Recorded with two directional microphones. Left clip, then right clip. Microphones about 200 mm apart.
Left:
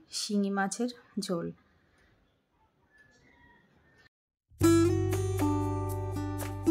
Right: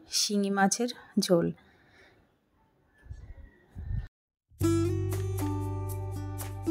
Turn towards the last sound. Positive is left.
turn(degrees=0)  # may be behind; listen again after turning